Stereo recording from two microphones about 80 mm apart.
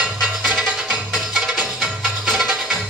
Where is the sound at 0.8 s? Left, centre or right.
Centre.